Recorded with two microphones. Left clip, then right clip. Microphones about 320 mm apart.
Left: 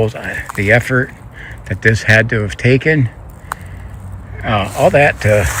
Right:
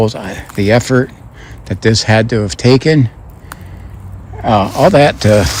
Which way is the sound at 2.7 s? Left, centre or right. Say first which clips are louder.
Right 3 dB; right.